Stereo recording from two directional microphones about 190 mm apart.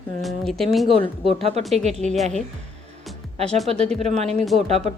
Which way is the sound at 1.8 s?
35° right (ahead or behind).